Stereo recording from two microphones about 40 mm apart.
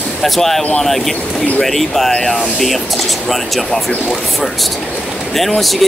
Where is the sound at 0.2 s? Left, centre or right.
Centre.